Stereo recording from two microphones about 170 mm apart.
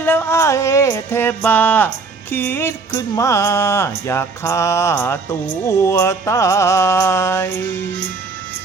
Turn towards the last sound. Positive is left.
turn(degrees=15)  # may be behind; listen again after turning